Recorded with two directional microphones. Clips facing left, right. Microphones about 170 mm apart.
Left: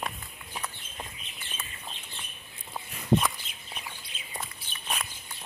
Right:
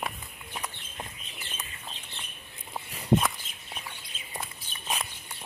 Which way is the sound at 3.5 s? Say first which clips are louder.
Left 1 dB; 45° right (ahead or behind).